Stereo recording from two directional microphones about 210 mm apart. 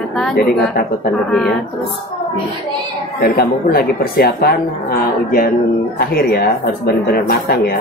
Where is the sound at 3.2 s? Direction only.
45° left (ahead or behind).